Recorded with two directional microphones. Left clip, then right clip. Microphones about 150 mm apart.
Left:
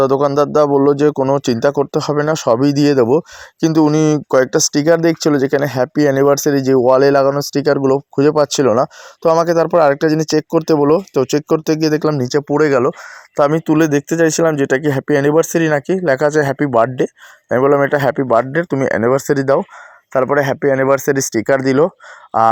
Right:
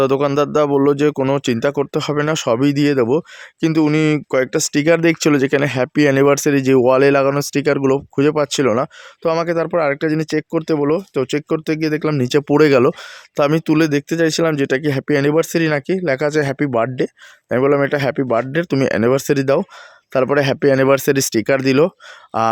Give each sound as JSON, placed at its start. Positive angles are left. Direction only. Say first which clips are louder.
{"t": 0.3, "sound": "speech", "louder": "left 3 dB", "side_deg": -10}
{"t": 5.0, "sound": "speech", "louder": "left 1 dB", "side_deg": -20}
{"t": 9.2, "sound": "speech", "louder": "left 5 dB", "side_deg": 5}
{"t": 12.2, "sound": "speech", "louder": "right 1 dB", "side_deg": -70}
{"t": 13.3, "sound": "speech", "louder": "left 2 dB", "side_deg": -20}
{"t": 20.7, "sound": "speech", "louder": "even", "side_deg": -55}
{"t": 21.1, "sound": "speech", "louder": "left 1 dB", "side_deg": -30}